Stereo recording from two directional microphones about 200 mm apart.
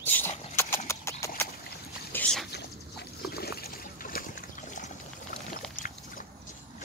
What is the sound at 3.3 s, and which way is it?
Trickle, 50° left (ahead or behind).